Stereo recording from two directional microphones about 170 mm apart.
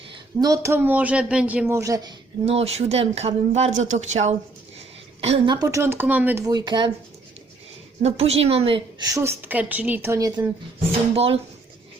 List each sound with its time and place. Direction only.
0.3 s speech: 20° right (ahead or behind)
2.5 s speech: 35° right (ahead or behind)
5.5 s speech: 15° right (ahead or behind)
8.0 s speech: 35° right (ahead or behind)
9.1 s speech: 15° right (ahead or behind)
11.1 s speech: 35° right (ahead or behind)